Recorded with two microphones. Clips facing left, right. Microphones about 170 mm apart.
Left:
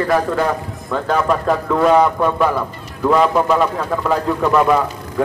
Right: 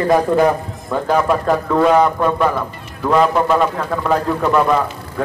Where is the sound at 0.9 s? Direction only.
5° right (ahead or behind).